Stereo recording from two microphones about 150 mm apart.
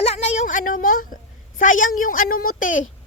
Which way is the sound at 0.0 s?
45° left (ahead or behind).